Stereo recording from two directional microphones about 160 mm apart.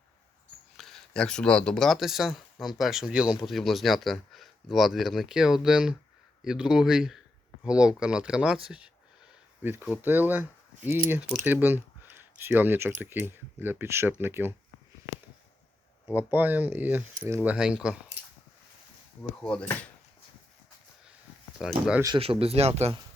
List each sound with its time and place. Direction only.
0.8 s speech: centre (ahead or behind); by 14.5 s 15° right (ahead or behind)
16.1 s speech: 10° right (ahead or behind)
19.4 s speech: 5° left (ahead or behind)
21.6 s speech: 5° right (ahead or behind)
22.0 s speech: 30° right (ahead or behind)